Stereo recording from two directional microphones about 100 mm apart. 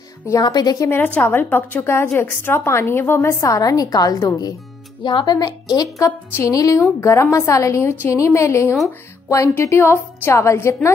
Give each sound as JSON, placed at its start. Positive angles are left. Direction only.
{"t": 0.4, "sound": "a woman's voice", "side_deg": 40}
{"t": 0.8, "sound": "a woman's voice", "side_deg": 20}